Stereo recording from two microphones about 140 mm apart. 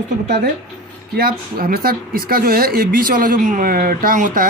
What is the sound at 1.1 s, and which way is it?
Speech, 90° right.